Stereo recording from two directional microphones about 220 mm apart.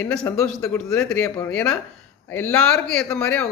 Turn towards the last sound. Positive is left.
turn(degrees=5)  # may be behind; listen again after turning